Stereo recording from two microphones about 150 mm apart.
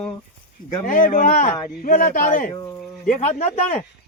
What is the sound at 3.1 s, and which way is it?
Speech, 50° left (ahead or behind).